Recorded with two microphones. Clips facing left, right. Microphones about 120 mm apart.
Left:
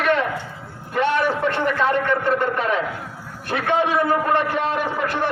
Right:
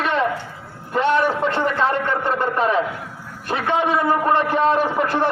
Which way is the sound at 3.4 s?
20° right (ahead or behind).